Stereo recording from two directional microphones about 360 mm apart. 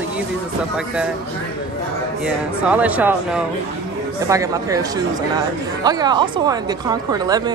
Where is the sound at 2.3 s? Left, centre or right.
Centre.